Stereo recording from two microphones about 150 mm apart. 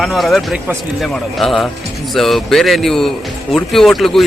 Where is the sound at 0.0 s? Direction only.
Centre (ahead or behind).